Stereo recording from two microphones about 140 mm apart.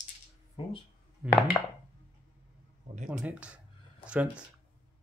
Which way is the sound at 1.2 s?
10° right (ahead or behind).